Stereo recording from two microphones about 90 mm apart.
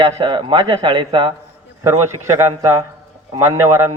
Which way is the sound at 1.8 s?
30° right (ahead or behind).